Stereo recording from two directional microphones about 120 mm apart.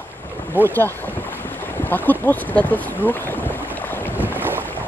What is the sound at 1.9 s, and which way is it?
Speech, 15° left (ahead or behind).